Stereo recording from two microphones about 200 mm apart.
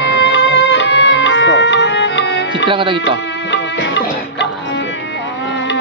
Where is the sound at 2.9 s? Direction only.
60° left (ahead or behind).